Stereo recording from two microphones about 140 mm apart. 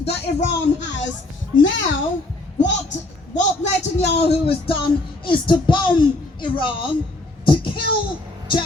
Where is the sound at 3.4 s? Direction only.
55° left (ahead or behind).